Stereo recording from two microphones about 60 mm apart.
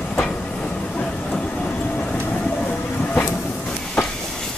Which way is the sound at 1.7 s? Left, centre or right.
Left.